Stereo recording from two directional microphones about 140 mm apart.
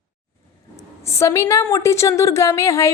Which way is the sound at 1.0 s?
20° left (ahead or behind).